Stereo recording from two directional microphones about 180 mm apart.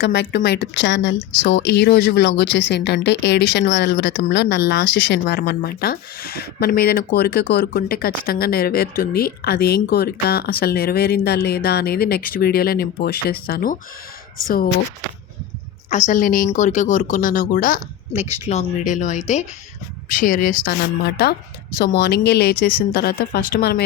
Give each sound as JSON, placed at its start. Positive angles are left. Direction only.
{"t": 0.0, "sound": "speech", "side_deg": 80}
{"t": 15.9, "sound": "speech", "side_deg": 40}